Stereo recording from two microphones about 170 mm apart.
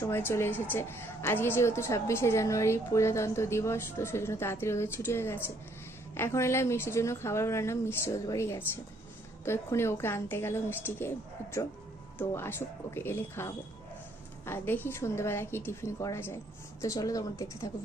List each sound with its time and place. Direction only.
0.0 s a woman's voice: 15° left (ahead or behind)
12.2 s a woman's voice: 15° left (ahead or behind)